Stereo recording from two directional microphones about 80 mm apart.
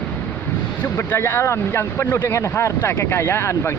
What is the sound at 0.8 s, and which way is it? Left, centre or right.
Speech, left.